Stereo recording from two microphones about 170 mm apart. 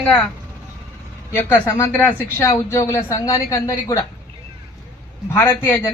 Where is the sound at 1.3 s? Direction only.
10° left (ahead or behind).